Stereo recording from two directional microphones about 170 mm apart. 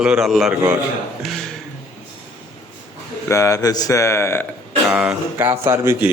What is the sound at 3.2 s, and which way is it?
Speech, 15° left (ahead or behind).